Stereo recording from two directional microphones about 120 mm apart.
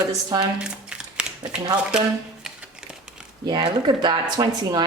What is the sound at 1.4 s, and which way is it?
Speech, 35° right (ahead or behind).